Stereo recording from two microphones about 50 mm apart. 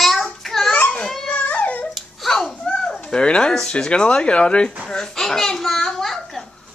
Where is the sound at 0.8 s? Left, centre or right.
Left.